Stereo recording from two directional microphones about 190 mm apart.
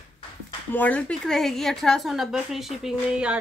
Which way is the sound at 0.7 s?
10° left (ahead or behind).